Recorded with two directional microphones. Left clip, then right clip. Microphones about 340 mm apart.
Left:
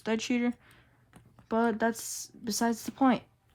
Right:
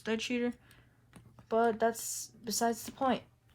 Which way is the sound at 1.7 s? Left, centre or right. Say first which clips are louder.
Left 1 dB; centre.